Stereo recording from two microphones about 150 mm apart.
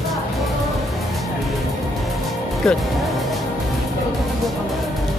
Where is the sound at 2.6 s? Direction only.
5° left (ahead or behind).